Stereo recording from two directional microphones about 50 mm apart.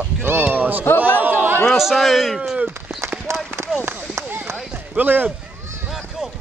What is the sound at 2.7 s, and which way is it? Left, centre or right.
Run, right.